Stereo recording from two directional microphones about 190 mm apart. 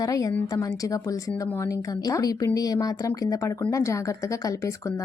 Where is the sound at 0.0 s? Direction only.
20° left (ahead or behind).